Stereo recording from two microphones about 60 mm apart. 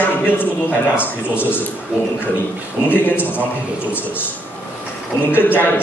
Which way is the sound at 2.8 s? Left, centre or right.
Left.